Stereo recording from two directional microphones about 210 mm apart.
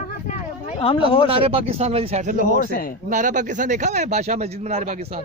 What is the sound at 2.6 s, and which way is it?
Speech, 45° left (ahead or behind).